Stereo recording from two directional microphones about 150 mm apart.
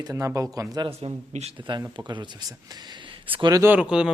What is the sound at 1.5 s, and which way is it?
A man's voice, 30° right (ahead or behind).